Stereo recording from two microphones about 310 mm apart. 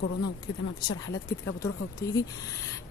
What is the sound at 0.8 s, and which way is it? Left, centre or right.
Speech, left.